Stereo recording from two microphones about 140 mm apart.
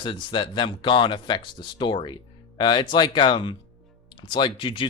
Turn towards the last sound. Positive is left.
turn(degrees=35)  # may be behind; listen again after turning